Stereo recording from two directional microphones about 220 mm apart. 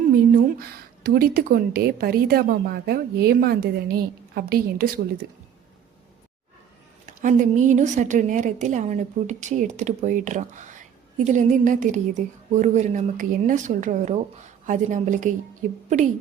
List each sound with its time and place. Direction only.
0.6 s a woman's voice: 45° right (ahead or behind)
7.0 s a woman's voice: 35° right (ahead or behind)